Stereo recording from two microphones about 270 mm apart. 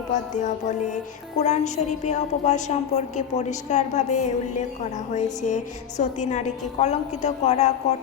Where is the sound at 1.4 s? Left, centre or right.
Left.